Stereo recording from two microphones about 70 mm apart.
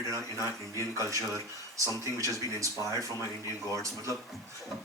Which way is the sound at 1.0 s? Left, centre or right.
Right.